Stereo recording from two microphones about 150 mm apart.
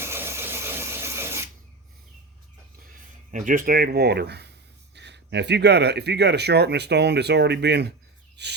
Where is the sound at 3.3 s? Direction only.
60° right (ahead or behind); by 4.4 s 90° right.